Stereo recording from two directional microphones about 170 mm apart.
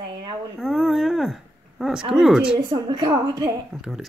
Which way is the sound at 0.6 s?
Centre (ahead or behind).